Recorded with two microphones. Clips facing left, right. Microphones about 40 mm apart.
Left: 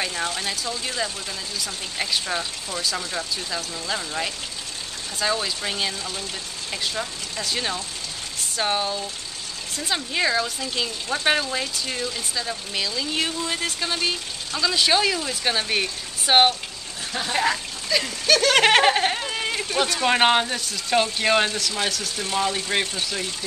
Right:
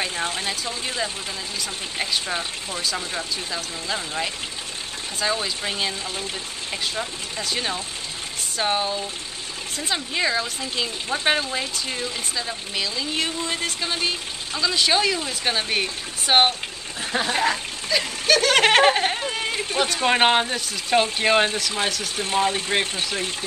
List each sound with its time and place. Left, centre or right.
0.0 s speech: right
1.6 s speech: centre
22.1 s speech: right